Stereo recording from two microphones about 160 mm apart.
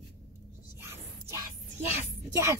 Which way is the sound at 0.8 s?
15° right (ahead or behind).